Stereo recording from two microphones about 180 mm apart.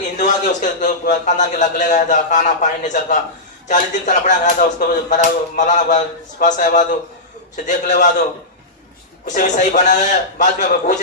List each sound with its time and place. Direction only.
0.2 s a man's voice: 45° left (ahead or behind)
9.2 s a man's voice: 45° left (ahead or behind)